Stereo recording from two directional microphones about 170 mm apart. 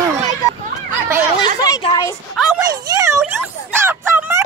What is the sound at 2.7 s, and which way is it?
Speech, 20° right (ahead or behind).